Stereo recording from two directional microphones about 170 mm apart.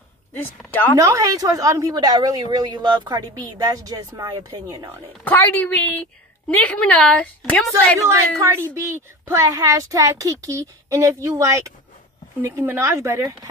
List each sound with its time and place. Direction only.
0.3 s a woman's voice: 10° left (ahead or behind)
0.9 s a woman's voice: 20° right (ahead or behind)
5.2 s a woman's voice: 10° left (ahead or behind)
8.4 s a woman's voice: 15° right (ahead or behind)